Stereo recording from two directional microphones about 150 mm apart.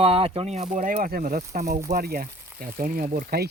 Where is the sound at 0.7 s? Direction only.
60° right (ahead or behind).